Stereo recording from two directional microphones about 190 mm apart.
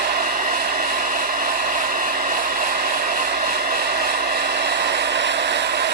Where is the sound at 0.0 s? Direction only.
55° right (ahead or behind).